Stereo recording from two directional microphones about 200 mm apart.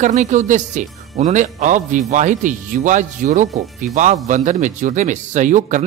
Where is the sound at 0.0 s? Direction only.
35° right (ahead or behind).